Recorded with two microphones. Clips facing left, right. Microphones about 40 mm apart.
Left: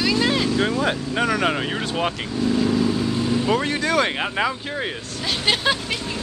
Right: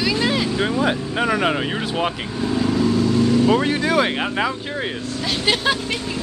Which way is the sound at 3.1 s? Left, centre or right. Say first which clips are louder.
Right 5 dB; centre.